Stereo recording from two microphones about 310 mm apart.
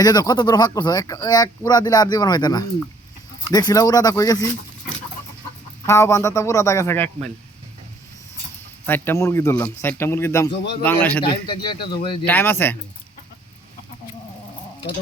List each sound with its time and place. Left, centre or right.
0.0 s speech: centre
5.8 s speech: centre
8.9 s speech: centre
11.2 s speech: centre